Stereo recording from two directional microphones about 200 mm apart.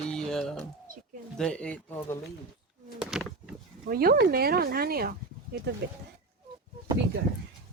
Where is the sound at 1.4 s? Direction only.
5° left (ahead or behind).